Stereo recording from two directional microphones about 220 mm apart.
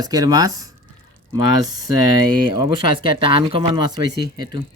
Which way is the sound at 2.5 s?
20° right (ahead or behind).